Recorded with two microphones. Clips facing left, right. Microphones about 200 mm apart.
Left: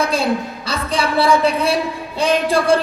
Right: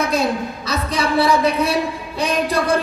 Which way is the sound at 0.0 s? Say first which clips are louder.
Even; 30° left (ahead or behind).